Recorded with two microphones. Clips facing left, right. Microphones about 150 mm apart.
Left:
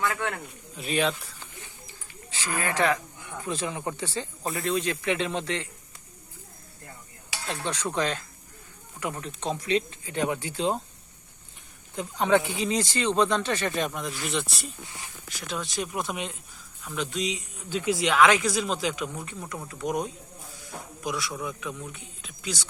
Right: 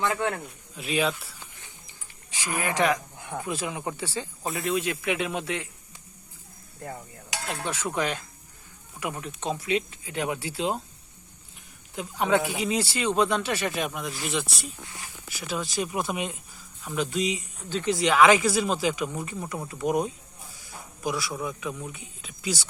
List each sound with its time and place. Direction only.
0.0 s speech: 20° right (ahead or behind)
0.8 s speech: 5° right (ahead or behind)
1.9 s a sound: 15° right (ahead or behind)
3.4 s speech: 10° right (ahead or behind)
4.4 s speech: centre (ahead or behind)
7.4 s speech: 10° right (ahead or behind)
11.9 s speech: 10° right (ahead or behind)
17.7 s speech: 10° left (ahead or behind); by 22.7 s 5° right (ahead or behind)